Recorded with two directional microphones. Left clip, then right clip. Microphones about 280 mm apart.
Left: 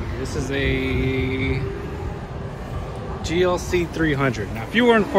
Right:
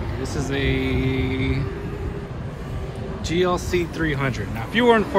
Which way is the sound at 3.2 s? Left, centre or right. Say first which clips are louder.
Left 1 dB; centre.